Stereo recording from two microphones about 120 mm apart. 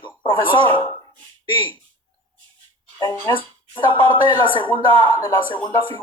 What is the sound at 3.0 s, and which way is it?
Speech, 35° left (ahead or behind).